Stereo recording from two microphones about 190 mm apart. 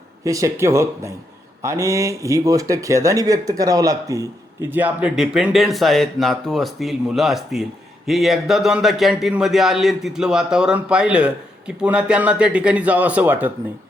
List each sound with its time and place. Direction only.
0.3 s speech: 15° right (ahead or behind)